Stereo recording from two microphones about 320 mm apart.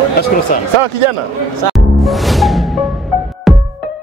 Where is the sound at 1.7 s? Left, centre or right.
Centre.